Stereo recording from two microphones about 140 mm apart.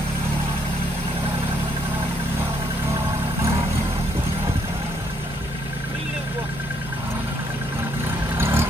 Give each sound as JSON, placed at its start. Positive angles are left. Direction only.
{"t": 8.4, "sound": "vehicle", "side_deg": -20}